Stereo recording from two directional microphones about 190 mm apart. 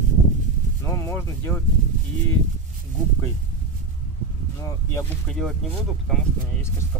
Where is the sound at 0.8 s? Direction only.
15° left (ahead or behind).